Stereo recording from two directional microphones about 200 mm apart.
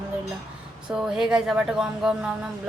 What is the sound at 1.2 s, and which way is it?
Speech, 5° right (ahead or behind).